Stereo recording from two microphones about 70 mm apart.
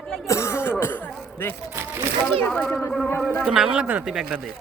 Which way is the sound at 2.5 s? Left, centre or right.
Centre.